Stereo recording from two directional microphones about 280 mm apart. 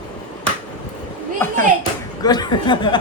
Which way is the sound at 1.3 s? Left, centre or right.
Centre.